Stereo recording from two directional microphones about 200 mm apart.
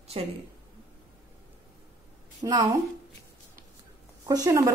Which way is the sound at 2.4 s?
20° right (ahead or behind).